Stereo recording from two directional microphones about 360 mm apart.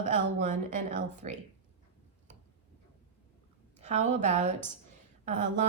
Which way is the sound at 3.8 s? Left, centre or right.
Centre.